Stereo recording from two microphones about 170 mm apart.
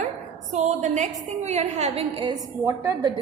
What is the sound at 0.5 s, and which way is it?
A woman's voice, 45° right (ahead or behind).